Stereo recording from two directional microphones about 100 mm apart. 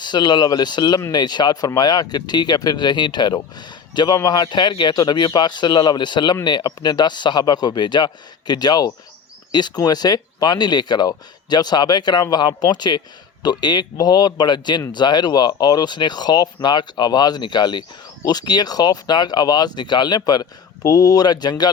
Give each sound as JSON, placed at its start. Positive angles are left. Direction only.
{"t": 0.0, "sound": "speech", "side_deg": 50}